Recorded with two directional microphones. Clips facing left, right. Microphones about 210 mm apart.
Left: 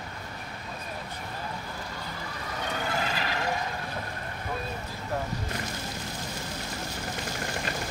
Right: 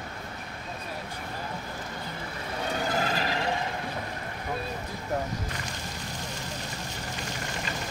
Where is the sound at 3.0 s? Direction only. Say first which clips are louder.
Right 3 dB; 40° right (ahead or behind).